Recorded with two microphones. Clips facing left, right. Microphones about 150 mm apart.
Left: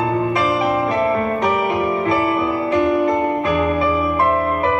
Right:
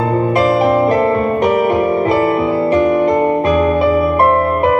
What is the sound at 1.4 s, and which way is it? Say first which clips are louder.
Music: right 6 dB; 55° right (ahead or behind).